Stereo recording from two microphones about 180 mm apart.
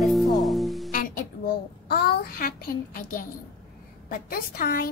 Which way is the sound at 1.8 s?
60° left (ahead or behind).